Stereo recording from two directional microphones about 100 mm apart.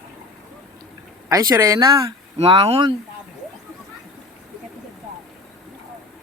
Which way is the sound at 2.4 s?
55° right (ahead or behind).